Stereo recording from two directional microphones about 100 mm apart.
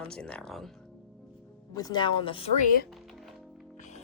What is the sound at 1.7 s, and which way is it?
Speech, 40° left (ahead or behind).